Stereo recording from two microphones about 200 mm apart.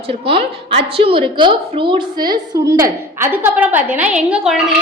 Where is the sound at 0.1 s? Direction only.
25° right (ahead or behind).